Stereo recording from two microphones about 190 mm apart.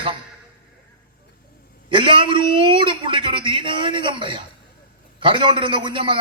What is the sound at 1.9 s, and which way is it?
A man's voice, 25° right (ahead or behind).